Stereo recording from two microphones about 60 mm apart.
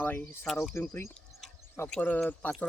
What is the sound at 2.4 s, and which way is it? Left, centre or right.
Speech, left.